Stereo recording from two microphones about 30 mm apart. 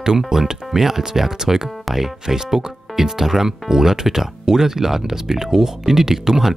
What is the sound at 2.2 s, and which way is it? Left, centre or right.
Speech, centre.